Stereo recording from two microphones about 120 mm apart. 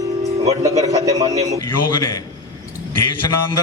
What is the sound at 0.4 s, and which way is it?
Speech, 30° right (ahead or behind).